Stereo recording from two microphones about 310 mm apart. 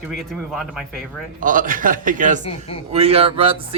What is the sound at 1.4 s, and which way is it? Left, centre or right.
Speech, right.